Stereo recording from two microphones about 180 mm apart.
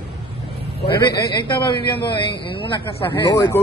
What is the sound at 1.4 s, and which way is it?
Speech, 25° left (ahead or behind).